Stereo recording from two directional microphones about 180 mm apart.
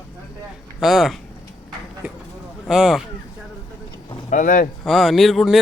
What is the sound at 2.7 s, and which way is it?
Speech, centre (ahead or behind).